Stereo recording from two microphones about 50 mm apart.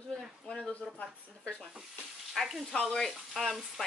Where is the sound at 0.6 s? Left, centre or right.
Left.